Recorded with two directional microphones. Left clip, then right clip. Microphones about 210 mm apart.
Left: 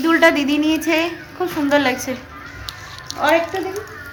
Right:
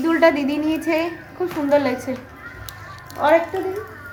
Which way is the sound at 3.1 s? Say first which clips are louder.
Left 2 dB; 25° right (ahead or behind).